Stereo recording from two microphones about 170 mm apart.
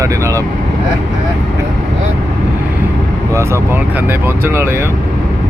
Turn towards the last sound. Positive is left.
turn(degrees=-15)  # may be behind; listen again after turning